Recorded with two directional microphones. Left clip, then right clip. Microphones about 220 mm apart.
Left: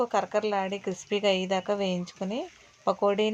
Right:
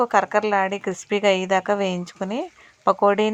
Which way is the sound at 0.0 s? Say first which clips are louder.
Right 7 dB; 20° right (ahead or behind).